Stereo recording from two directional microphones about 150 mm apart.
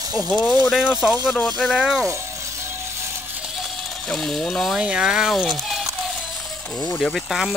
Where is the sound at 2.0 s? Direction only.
20° right (ahead or behind).